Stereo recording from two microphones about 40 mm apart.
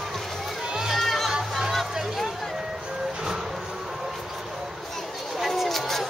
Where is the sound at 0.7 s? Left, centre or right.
Centre.